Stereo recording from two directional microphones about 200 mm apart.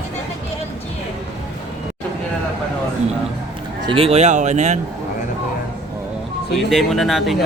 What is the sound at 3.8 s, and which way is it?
Speech, 30° right (ahead or behind).